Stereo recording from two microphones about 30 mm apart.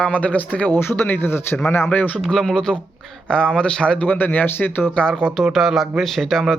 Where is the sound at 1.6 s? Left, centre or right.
Left.